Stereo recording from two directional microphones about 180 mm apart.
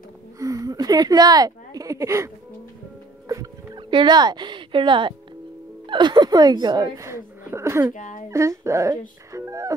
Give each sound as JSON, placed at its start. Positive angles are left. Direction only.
{"t": 0.4, "sound": "a sound", "side_deg": -20}
{"t": 5.9, "sound": "a woman's voice", "side_deg": -25}
{"t": 7.9, "sound": "speech", "side_deg": 45}
{"t": 8.3, "sound": "speech", "side_deg": -15}
{"t": 9.3, "sound": "music", "side_deg": -15}